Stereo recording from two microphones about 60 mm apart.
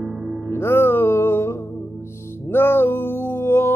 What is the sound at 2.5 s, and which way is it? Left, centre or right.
Music, left.